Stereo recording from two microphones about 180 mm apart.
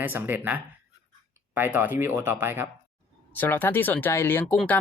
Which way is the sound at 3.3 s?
10° left (ahead or behind).